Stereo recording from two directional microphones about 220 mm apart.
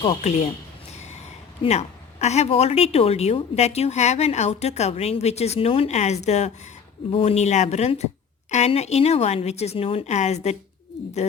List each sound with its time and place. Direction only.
0.0 s a woman's voice: 25° left (ahead or behind)
1.6 s a woman's voice: 30° left (ahead or behind)